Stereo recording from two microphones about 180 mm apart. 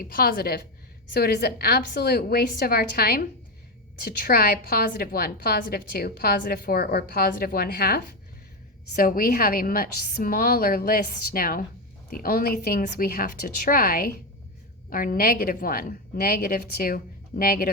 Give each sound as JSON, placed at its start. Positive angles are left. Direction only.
{"t": 0.0, "sound": "a woman's voice", "side_deg": 50}